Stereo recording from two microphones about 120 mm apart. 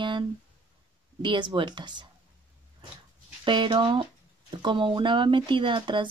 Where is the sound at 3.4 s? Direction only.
40° right (ahead or behind).